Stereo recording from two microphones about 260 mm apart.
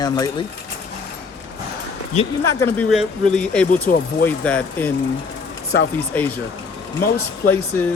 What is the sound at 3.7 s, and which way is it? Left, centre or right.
Speech, left.